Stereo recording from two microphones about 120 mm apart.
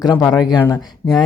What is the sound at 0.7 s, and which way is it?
Speech, 35° left (ahead or behind).